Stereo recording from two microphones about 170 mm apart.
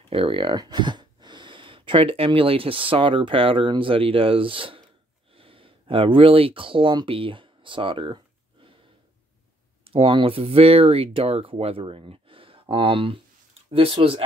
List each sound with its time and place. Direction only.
0.1 s speech: 30° right (ahead or behind)
9.8 s speech: 30° right (ahead or behind)